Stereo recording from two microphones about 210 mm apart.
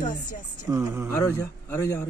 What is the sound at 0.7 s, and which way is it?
Speech, 15° right (ahead or behind).